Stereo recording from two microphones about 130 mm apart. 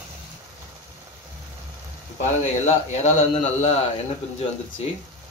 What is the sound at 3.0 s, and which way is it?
Speech, 65° left (ahead or behind).